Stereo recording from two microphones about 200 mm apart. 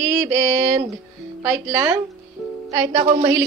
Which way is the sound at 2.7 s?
20° right (ahead or behind).